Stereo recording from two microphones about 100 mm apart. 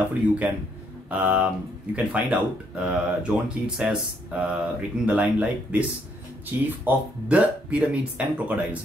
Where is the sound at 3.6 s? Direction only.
5° right (ahead or behind).